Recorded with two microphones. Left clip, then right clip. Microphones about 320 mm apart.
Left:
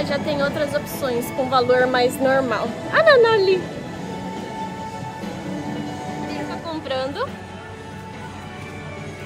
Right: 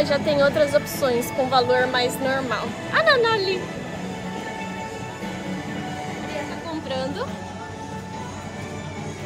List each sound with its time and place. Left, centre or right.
0.0 s speech: centre
1.5 s speech: centre
6.7 s music: centre